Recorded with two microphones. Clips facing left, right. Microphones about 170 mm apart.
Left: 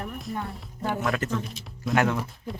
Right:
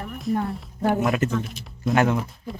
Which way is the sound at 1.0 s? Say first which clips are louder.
Right 5 dB; 20° right (ahead or behind).